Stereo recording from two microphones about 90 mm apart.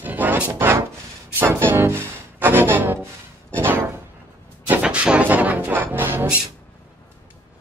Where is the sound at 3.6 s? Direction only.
25° right (ahead or behind).